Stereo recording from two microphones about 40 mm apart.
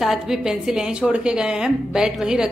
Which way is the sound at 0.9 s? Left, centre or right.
Right.